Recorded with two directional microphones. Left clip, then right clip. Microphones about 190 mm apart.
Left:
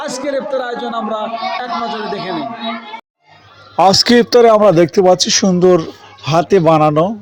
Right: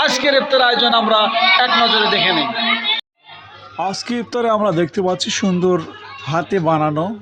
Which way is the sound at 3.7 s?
35° left (ahead or behind).